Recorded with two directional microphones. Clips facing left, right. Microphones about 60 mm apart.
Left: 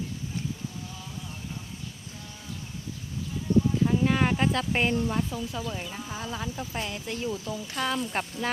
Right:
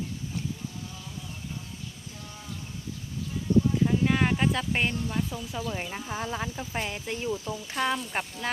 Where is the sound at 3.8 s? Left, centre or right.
Centre.